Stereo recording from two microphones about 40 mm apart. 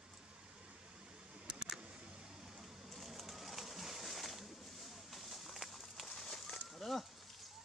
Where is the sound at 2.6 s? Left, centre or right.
Centre.